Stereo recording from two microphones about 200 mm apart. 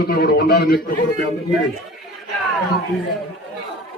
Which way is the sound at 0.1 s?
50° left (ahead or behind).